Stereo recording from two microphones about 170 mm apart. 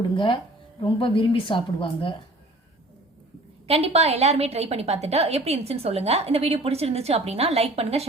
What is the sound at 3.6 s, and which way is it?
A woman's voice, 35° right (ahead or behind).